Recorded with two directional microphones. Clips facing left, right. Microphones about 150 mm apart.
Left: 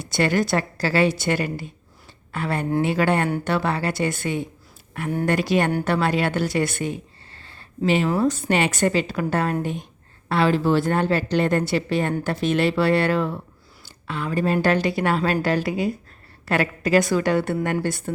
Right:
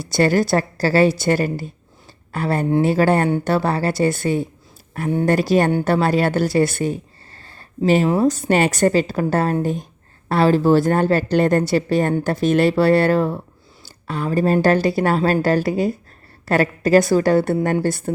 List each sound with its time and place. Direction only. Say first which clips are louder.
0.0 s speech: right 4 dB; 35° right (ahead or behind)